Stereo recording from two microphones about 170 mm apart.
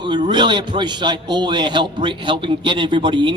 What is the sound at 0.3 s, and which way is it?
A man's voice, 25° right (ahead or behind).